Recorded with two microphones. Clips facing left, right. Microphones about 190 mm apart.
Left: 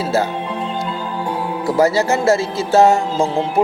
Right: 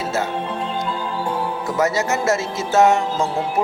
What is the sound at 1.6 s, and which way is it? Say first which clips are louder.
A man's voice: left 6 dB; 30° left (ahead or behind).